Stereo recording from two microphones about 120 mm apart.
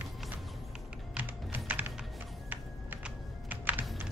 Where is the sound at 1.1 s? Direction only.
15° right (ahead or behind).